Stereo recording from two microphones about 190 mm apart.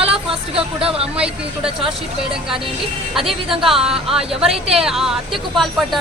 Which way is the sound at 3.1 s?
Centre (ahead or behind).